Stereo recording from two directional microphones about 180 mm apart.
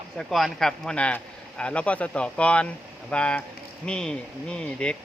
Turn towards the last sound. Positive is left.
turn(degrees=5)  # may be behind; listen again after turning